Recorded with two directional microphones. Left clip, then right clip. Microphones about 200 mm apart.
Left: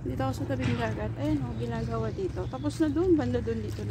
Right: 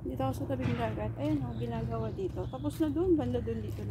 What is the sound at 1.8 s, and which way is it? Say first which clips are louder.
Speech: left 4 dB; 15° left (ahead or behind).